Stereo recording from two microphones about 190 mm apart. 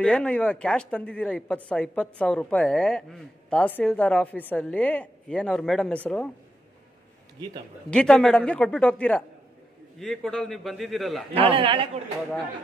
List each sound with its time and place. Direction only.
0.0 s speech: 5° left (ahead or behind)
7.9 s speech: 5° left (ahead or behind)
11.3 s a man's voice: 30° right (ahead or behind)